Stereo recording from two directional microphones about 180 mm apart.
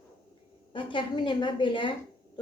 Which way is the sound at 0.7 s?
25° left (ahead or behind).